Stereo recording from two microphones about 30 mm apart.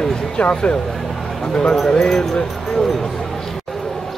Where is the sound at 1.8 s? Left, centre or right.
Left.